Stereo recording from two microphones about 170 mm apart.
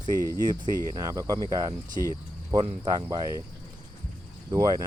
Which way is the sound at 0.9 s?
20° right (ahead or behind).